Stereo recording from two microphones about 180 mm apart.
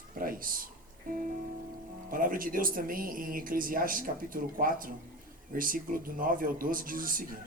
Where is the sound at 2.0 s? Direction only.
50° right (ahead or behind).